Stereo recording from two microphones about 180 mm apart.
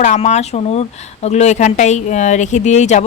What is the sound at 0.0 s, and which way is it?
Speech, 40° left (ahead or behind).